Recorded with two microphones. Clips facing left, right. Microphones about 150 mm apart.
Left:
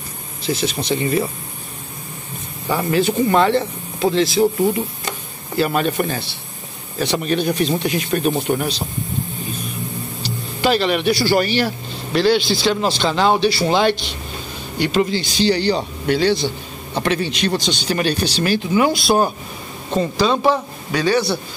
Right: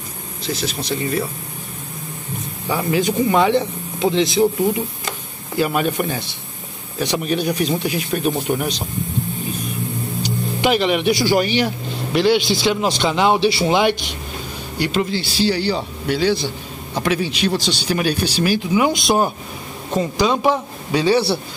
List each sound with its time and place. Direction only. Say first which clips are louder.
0.5 s speech: left 3 dB; centre (ahead or behind)
2.7 s speech: left 1 dB; 10° right (ahead or behind)
5.6 s speech: left 1 dB; 10° right (ahead or behind)
10.2 s speech: even; 15° right (ahead or behind)
14.8 s speech: left 2 dB; centre (ahead or behind)
20.9 s a man's voice: right 1 dB; 25° right (ahead or behind)